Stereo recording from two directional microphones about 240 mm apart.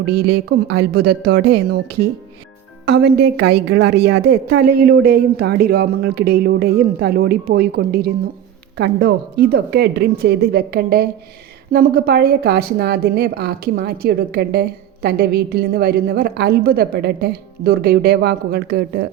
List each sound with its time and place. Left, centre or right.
0.0 s speech: right
0.3 s a woman's voice: right
2.8 s a woman's voice: right